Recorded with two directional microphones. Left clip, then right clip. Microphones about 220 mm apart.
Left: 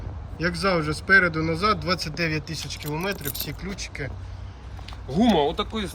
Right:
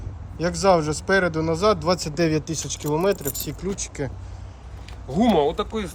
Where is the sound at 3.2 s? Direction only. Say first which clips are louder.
Right 3 dB; 60° right (ahead or behind).